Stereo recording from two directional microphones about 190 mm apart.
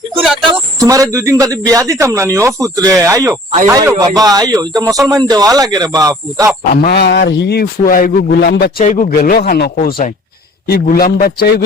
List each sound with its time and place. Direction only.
0.8 s speech: 15° right (ahead or behind)
6.7 s a man's voice: 55° left (ahead or behind)
8.8 s a man's voice: 45° left (ahead or behind)